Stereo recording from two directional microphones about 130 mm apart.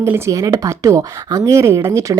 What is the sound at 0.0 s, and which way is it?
Speech, 25° right (ahead or behind).